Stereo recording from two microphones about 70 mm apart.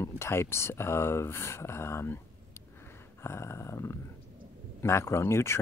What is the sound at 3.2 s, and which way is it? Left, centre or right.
Speech, left.